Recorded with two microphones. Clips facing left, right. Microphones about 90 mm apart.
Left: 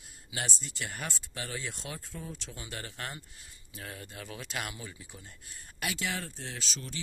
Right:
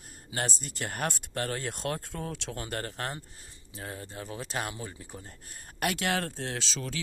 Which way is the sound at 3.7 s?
35° right (ahead or behind).